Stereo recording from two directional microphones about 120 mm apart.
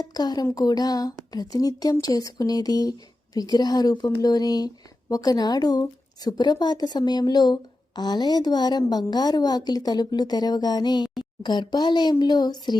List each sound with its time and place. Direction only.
0.1 s speech: 35° left (ahead or behind)